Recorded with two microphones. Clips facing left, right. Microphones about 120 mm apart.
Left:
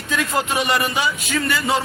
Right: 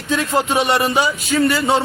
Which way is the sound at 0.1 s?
35° right (ahead or behind).